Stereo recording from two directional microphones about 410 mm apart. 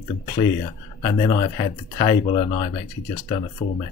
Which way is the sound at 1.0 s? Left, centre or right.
Centre.